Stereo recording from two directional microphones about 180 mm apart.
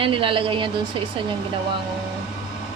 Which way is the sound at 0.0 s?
30° right (ahead or behind).